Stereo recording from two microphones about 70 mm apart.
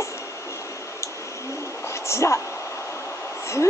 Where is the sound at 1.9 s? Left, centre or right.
Left.